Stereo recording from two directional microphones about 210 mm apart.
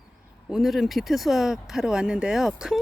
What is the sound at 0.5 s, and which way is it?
Speech, centre (ahead or behind).